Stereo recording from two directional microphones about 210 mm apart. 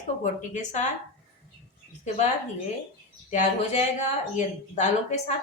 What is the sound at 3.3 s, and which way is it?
A woman's voice, 35° left (ahead or behind).